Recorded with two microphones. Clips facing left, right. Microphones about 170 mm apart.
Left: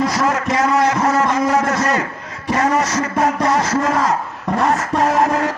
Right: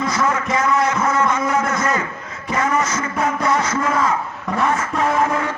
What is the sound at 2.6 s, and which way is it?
Music, 40° left (ahead or behind).